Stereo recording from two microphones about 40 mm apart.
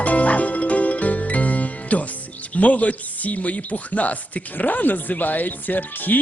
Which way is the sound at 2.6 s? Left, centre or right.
Left.